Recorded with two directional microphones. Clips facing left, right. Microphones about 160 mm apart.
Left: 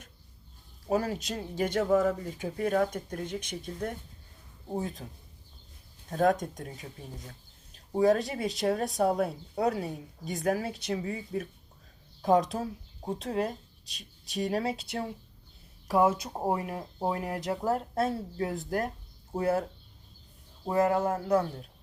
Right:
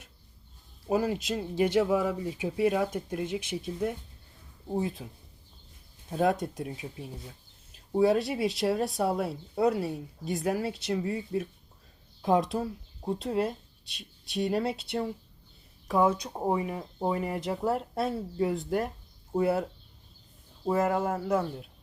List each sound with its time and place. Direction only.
0.9 s speech: centre (ahead or behind)
6.1 s speech: 5° right (ahead or behind)
20.7 s speech: centre (ahead or behind)